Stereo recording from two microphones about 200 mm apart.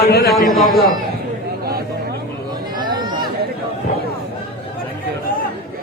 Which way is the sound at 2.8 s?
20° right (ahead or behind).